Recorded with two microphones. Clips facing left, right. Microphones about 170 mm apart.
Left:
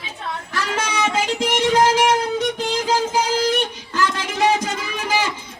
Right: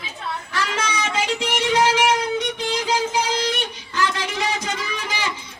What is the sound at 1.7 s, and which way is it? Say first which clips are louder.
Music: left 2 dB; 45° left (ahead or behind).